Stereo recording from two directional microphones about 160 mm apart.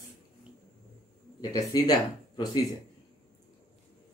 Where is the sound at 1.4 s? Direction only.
25° left (ahead or behind).